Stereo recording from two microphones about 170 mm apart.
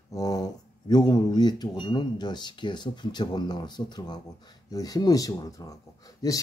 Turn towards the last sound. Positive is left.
turn(degrees=20)  # may be behind; listen again after turning